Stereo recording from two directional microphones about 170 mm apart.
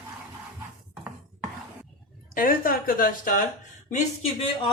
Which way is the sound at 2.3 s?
55° left (ahead or behind).